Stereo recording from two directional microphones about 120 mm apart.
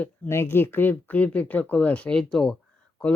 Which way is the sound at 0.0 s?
20° left (ahead or behind).